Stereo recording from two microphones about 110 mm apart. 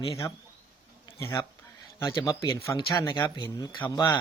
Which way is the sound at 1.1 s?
30° left (ahead or behind).